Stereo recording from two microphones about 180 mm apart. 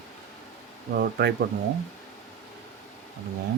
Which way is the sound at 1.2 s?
65° right (ahead or behind).